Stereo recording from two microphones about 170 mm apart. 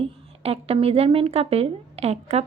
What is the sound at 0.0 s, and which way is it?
A woman's voice, 35° right (ahead or behind).